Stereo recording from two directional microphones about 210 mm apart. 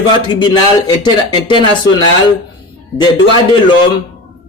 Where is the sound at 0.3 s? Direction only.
20° left (ahead or behind).